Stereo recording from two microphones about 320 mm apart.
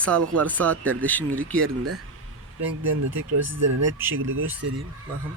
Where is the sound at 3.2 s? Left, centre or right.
Right.